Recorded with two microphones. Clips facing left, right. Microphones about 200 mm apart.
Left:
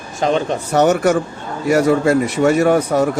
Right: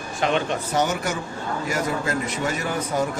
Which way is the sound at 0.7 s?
70° left (ahead or behind).